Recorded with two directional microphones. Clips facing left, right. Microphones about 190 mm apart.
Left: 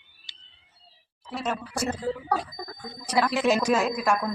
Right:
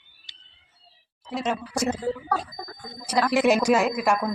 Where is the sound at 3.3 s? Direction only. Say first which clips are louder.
Right 5 dB; 10° right (ahead or behind).